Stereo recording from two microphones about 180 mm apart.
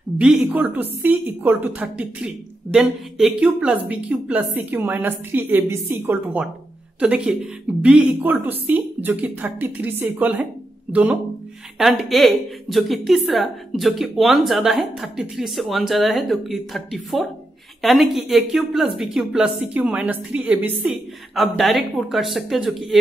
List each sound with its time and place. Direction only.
0.2 s a woman's voice: 5° right (ahead or behind)